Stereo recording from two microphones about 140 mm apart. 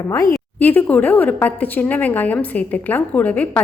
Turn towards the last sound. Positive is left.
turn(degrees=10)  # may be behind; listen again after turning